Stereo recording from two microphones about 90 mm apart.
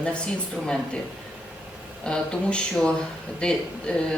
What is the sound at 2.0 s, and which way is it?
Speech, 10° left (ahead or behind).